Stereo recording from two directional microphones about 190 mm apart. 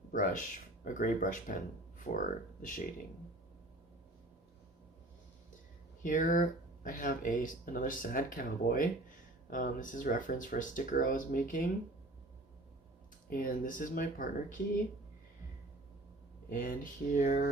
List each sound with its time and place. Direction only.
0.1 s speech: 45° left (ahead or behind)
6.0 s speech: 45° left (ahead or behind)
13.3 s speech: 45° left (ahead or behind)
16.5 s speech: 45° left (ahead or behind)